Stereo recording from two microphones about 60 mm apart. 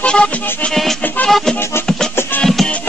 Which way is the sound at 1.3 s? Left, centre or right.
Centre.